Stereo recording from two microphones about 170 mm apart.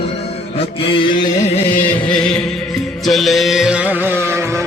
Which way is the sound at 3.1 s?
Centre (ahead or behind).